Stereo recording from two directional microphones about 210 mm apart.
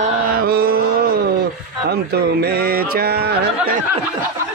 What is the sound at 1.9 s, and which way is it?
Music, 50° right (ahead or behind).